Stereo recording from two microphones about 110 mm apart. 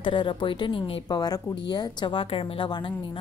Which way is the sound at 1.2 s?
35° left (ahead or behind).